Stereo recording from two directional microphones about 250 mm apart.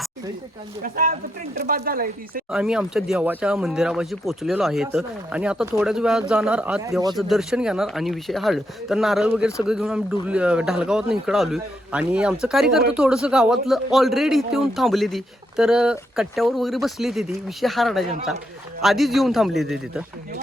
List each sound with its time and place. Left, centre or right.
0.8 s speech: right
2.5 s speech: centre
7.2 s speech: centre